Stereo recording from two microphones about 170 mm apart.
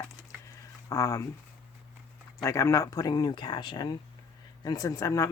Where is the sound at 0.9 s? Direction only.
20° left (ahead or behind).